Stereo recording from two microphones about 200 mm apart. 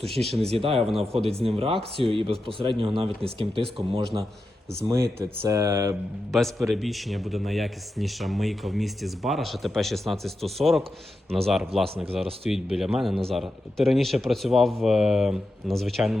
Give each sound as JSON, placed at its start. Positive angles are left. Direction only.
{"t": 0.2, "sound": "a man's voice", "side_deg": 0}
{"t": 1.1, "sound": "speech", "side_deg": -30}
{"t": 5.2, "sound": "speech", "side_deg": -15}
{"t": 6.3, "sound": "a man's voice", "side_deg": 0}